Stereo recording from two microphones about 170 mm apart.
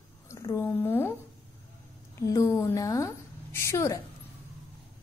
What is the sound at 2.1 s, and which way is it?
A woman's voice, 20° left (ahead or behind).